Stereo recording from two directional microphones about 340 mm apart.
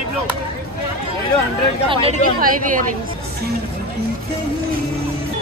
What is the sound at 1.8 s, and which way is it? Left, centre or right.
Speech, centre.